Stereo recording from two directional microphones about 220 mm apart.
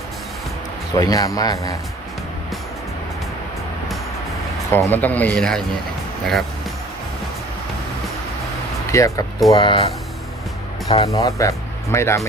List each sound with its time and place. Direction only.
0.9 s speech: 15° left (ahead or behind)
4.7 s speech: 10° left (ahead or behind)
8.9 s speech: 15° left (ahead or behind)
11.1 s speech: 15° left (ahead or behind)